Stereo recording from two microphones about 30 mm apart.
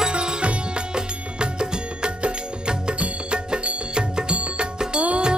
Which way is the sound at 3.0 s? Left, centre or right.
Right.